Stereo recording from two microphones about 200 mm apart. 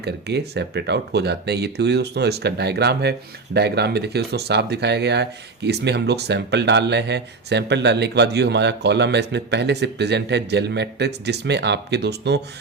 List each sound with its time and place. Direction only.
0.0 s speech: 55° right (ahead or behind)